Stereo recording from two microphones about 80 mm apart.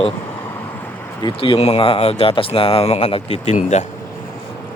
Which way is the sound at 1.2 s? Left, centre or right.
Left.